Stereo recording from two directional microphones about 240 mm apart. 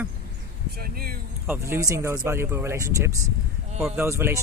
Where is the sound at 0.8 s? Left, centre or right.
Right.